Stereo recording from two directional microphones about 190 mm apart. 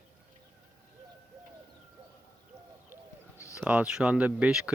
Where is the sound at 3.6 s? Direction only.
5° right (ahead or behind).